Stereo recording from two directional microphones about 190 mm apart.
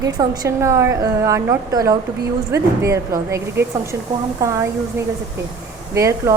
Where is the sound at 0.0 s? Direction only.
15° right (ahead or behind).